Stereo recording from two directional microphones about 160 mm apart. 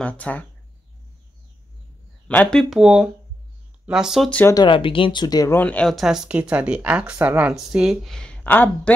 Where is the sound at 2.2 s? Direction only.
10° left (ahead or behind).